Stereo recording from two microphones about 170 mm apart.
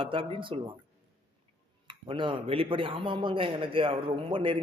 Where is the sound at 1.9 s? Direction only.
30° right (ahead or behind).